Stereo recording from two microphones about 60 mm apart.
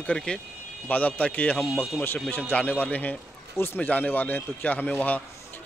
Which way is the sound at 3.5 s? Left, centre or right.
Left.